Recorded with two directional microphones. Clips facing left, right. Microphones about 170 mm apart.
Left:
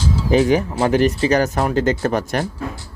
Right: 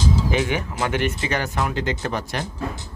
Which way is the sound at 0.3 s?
35° left (ahead or behind).